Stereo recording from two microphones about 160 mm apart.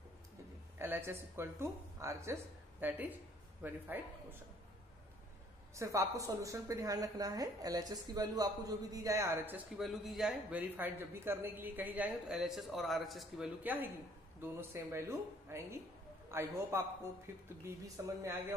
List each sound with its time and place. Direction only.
0.7 s a woman's voice: 15° right (ahead or behind)
5.8 s a woman's voice: 20° right (ahead or behind)
9.8 s speech: centre (ahead or behind)
13.6 s a woman's voice: 10° right (ahead or behind)